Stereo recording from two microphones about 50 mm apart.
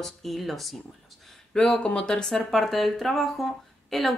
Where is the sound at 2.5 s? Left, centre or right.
Centre.